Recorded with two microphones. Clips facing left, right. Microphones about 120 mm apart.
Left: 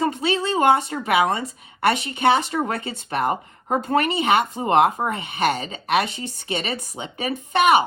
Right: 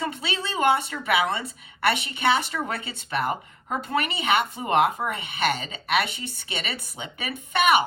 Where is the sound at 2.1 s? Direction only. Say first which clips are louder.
Left 5 dB; 45° left (ahead or behind).